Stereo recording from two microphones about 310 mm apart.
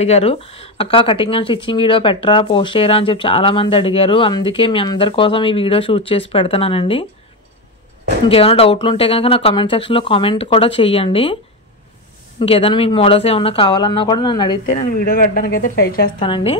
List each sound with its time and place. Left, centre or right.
0.0 s speech: centre
8.3 s speech: centre
12.4 s speech: centre
15.0 s speech: left
16.2 s speech: centre